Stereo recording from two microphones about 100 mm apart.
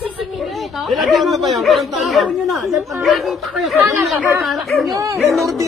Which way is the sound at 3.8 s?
25° right (ahead or behind).